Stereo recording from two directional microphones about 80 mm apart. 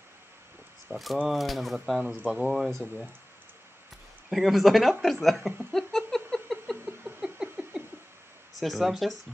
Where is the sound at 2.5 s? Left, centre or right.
Centre.